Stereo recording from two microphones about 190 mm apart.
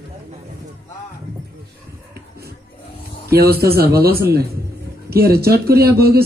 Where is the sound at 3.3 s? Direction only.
55° right (ahead or behind).